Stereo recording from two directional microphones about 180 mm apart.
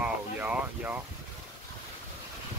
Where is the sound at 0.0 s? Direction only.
10° right (ahead or behind).